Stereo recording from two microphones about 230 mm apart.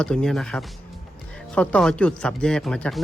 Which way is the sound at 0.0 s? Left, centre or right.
Centre.